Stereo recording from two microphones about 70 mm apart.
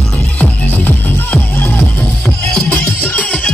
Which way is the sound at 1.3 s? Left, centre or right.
Left.